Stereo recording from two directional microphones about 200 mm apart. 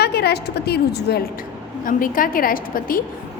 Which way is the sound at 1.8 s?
45° left (ahead or behind).